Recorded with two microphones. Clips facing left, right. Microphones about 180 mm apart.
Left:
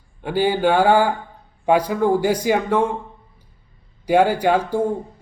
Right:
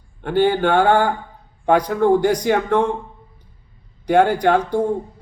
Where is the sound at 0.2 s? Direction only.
10° left (ahead or behind).